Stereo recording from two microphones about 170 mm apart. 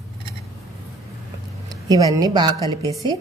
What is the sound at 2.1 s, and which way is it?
Speech, 25° right (ahead or behind).